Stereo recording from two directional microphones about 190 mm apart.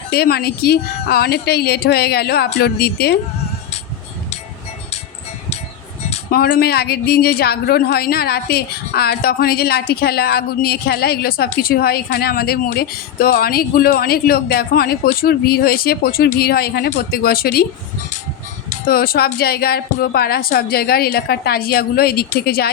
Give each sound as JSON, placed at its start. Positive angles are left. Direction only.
{"t": 0.1, "sound": "a woman's voice", "side_deg": 55}
{"t": 6.3, "sound": "a woman's voice", "side_deg": 55}
{"t": 18.7, "sound": "a child's voice", "side_deg": 50}